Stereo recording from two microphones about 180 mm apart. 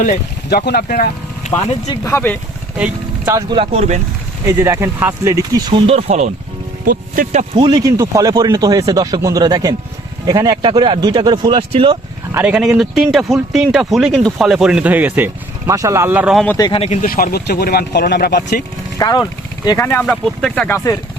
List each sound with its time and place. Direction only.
0.0 s speech: 55° left (ahead or behind)
1.9 s speech: 15° left (ahead or behind)
2.7 s vehicle: 5° right (ahead or behind)
3.3 s speech: 30° right (ahead or behind)
4.4 s speech: 15° right (ahead or behind); by 6.3 s 40° right (ahead or behind)
6.8 s speech: 50° right (ahead or behind)
7.5 s speech: 25° right (ahead or behind)
12.3 s speech: 10° right (ahead or behind)
16.6 s speech: 25° left (ahead or behind)
17.1 s speech: 55° left (ahead or behind)
18.9 s speech: 20° left (ahead or behind)
20.1 s speech: centre (ahead or behind)
20.7 s speech: 15° left (ahead or behind)